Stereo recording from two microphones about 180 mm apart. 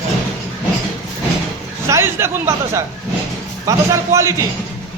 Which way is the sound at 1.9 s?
15° right (ahead or behind).